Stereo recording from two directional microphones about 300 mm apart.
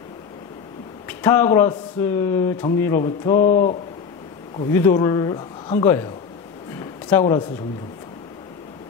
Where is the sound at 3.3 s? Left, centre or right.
Left.